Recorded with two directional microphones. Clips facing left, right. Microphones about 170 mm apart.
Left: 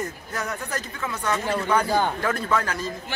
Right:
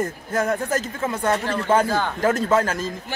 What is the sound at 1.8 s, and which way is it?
Speech, 15° left (ahead or behind).